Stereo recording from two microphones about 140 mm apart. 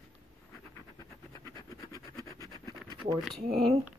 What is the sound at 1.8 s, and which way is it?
Scratch, 25° left (ahead or behind).